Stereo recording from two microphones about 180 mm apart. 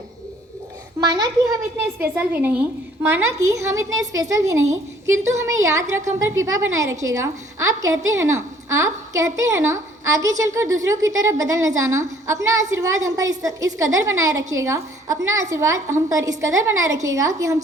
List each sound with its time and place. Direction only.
1.8 s a woman's voice: 10° right (ahead or behind)